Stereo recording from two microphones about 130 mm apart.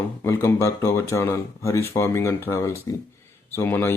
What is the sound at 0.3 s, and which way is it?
Speech, 25° left (ahead or behind).